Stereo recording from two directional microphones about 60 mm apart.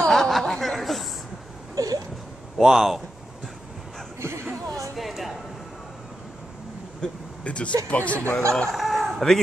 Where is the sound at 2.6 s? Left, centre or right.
Centre.